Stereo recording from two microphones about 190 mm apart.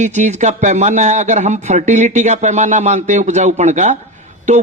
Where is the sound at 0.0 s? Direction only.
40° right (ahead or behind).